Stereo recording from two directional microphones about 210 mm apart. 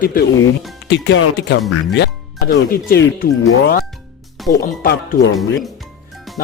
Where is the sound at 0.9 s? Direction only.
60° left (ahead or behind).